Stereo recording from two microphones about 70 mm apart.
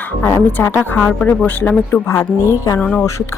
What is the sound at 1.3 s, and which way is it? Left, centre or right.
Speech, left.